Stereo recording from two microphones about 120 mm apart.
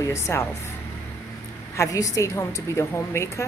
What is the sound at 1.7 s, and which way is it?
Speech, 30° left (ahead or behind).